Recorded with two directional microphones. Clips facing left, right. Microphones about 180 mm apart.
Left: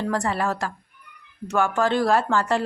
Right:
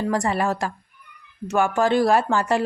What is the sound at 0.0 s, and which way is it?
Speech, 15° right (ahead or behind).